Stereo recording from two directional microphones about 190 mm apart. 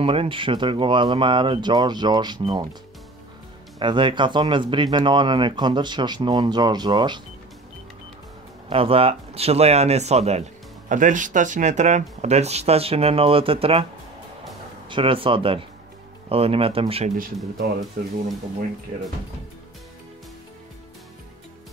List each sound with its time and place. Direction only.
0.0 s speech: 30° right (ahead or behind)
3.8 s speech: 25° right (ahead or behind)
8.6 s speech: 30° right (ahead or behind)
14.9 s speech: 25° right (ahead or behind)